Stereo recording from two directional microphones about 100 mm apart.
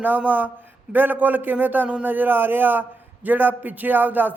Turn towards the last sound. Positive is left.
turn(degrees=-20)  # may be behind; listen again after turning